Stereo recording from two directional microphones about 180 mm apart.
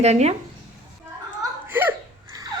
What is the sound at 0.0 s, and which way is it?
Speech, 35° right (ahead or behind).